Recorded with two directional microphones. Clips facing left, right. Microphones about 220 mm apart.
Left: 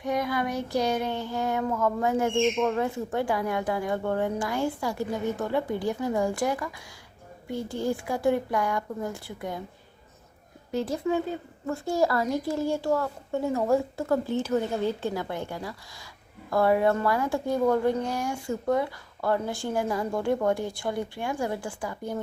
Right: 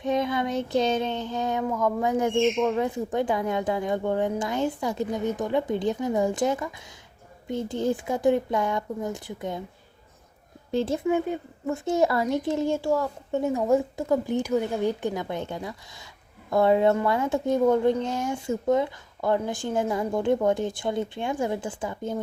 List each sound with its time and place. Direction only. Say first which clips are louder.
0.0 s a woman's voice: right 2 dB; 20° right (ahead or behind)
10.7 s a woman's voice: right 3 dB; 25° right (ahead or behind)